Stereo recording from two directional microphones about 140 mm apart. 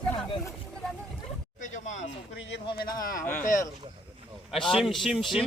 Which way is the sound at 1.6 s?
60° left (ahead or behind).